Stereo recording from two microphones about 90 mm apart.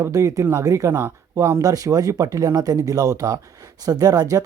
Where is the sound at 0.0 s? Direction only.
40° right (ahead or behind).